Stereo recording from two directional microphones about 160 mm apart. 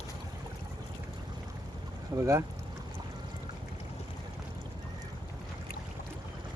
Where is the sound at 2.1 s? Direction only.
20° right (ahead or behind).